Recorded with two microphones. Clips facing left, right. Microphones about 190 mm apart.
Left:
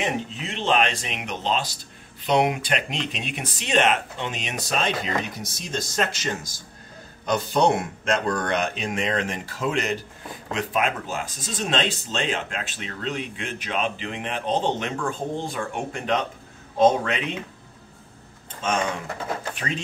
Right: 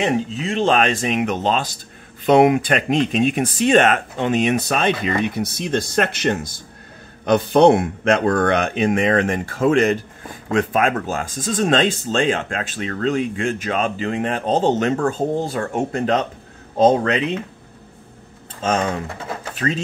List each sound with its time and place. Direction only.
0.5 s speech: 45° right (ahead or behind)